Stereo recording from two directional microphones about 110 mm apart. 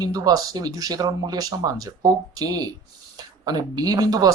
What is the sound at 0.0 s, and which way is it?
Speech, 35° right (ahead or behind).